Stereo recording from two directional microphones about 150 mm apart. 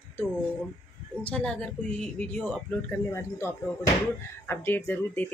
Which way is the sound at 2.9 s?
20° left (ahead or behind).